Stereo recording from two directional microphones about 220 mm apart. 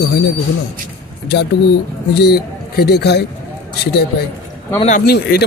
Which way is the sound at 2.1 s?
45° left (ahead or behind).